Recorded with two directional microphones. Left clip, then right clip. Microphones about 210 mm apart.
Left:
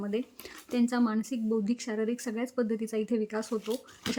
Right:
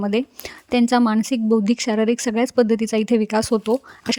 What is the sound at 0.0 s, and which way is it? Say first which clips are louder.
A woman's voice: right 12 dB; 50° right (ahead or behind).